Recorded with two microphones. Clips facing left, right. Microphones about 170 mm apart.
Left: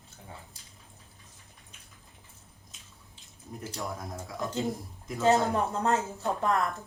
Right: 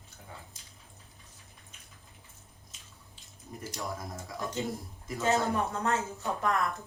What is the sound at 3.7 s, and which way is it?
Speech, centre (ahead or behind).